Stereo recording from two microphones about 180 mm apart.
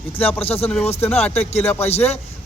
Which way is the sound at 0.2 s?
10° left (ahead or behind).